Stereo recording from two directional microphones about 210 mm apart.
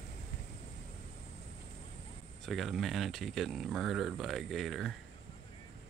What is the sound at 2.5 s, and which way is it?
Speech, centre (ahead or behind).